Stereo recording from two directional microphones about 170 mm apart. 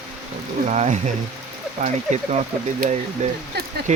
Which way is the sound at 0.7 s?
45° right (ahead or behind).